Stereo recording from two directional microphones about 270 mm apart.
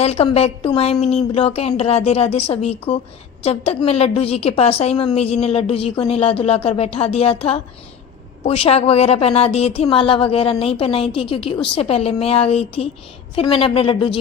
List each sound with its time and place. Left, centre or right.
0.0 s a woman's voice: left